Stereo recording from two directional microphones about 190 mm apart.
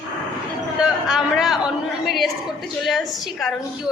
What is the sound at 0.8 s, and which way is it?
A man's voice, 5° right (ahead or behind).